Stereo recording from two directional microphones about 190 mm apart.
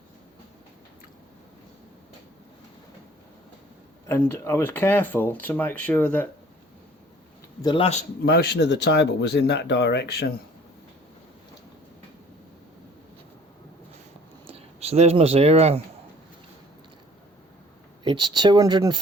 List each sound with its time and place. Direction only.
4.1 s speech: 15° left (ahead or behind)
7.6 s a man's voice: 25° left (ahead or behind)
8.2 s speech: 55° left (ahead or behind)
14.4 s speech: 30° right (ahead or behind)
18.0 s speech: 25° right (ahead or behind)